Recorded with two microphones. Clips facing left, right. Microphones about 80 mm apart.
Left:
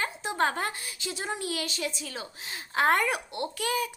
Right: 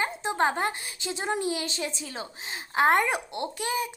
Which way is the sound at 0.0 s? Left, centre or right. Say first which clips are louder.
Right 2 dB; right.